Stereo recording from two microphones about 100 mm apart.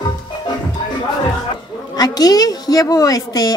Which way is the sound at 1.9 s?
40° left (ahead or behind).